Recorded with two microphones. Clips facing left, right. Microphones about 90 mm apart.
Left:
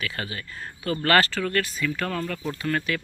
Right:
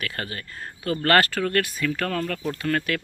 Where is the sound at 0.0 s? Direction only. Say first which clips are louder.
Even; 55° right (ahead or behind).